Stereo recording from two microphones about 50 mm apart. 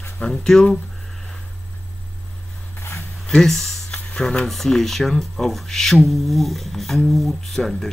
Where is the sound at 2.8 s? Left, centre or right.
Left.